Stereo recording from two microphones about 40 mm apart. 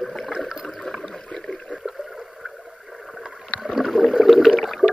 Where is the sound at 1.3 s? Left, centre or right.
Left.